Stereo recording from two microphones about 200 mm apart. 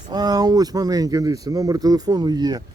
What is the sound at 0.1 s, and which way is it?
Speech, 20° right (ahead or behind).